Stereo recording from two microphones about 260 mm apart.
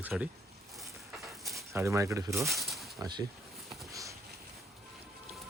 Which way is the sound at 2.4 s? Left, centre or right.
Centre.